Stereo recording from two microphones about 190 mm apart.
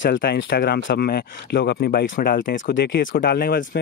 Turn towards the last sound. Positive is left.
turn(degrees=50)  # may be behind; listen again after turning